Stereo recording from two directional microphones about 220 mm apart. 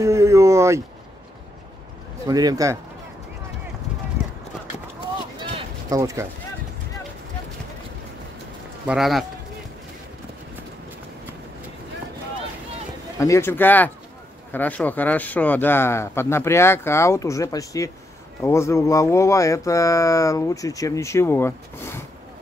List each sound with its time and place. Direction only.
0.0 s a sound: 15° right (ahead or behind)
2.2 s speech: 15° right (ahead or behind)
5.9 s speech: 15° right (ahead or behind)
8.8 s speech: centre (ahead or behind)
13.2 s speech: 10° left (ahead or behind)